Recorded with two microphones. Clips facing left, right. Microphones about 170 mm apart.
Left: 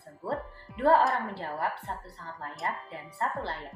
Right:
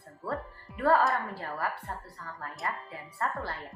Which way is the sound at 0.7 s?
25° left (ahead or behind).